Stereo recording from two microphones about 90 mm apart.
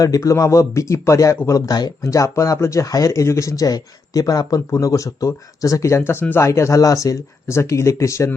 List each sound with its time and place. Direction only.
0.0 s speech: 40° left (ahead or behind)